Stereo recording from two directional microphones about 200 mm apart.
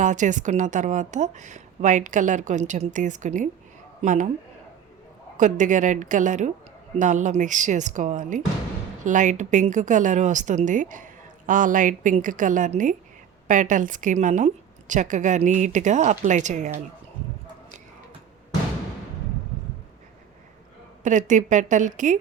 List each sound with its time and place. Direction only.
0.0 s a woman's voice: 40° right (ahead or behind)
5.4 s a woman's voice: 40° right (ahead or behind)
21.0 s a woman's voice: 40° right (ahead or behind)